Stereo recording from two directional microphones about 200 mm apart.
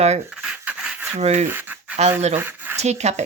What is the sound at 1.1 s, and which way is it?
Speech, 35° right (ahead or behind).